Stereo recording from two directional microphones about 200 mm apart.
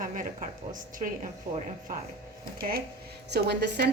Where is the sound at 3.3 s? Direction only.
55° right (ahead or behind).